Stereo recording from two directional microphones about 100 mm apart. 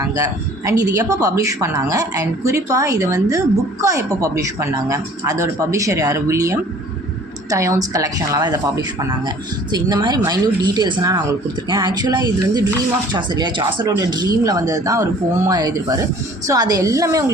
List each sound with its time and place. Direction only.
0.0 s a woman's voice: 30° right (ahead or behind)
11.7 s a woman's voice: 50° right (ahead or behind); by 17.3 s 30° right (ahead or behind)